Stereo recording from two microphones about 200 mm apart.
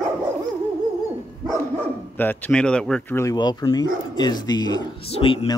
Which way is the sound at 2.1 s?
10° left (ahead or behind).